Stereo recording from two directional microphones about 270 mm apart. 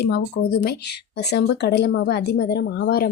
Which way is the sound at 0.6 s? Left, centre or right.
Left.